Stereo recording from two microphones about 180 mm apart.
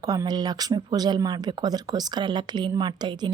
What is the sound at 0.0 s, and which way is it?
Speech, 20° right (ahead or behind).